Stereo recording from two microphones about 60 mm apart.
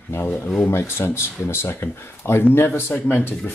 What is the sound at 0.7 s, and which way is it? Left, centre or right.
Speech, left.